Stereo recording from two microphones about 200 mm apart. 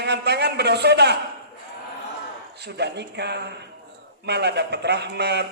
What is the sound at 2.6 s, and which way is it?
A man's voice, 55° right (ahead or behind).